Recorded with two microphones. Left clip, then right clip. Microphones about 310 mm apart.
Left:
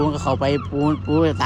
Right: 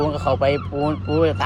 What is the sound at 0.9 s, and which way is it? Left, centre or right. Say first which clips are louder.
Speech: even; centre.